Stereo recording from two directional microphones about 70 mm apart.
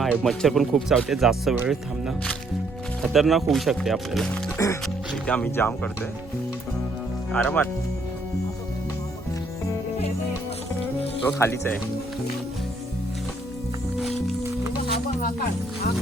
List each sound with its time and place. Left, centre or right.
0.2 s speech: centre
4.5 s music: left
5.2 s speech: centre
5.5 s speech: left
7.3 s speech: left
11.3 s speech: left